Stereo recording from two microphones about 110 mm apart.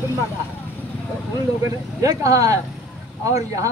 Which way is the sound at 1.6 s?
30° right (ahead or behind).